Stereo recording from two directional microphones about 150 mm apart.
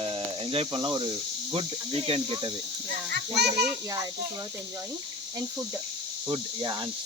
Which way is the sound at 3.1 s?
90° right.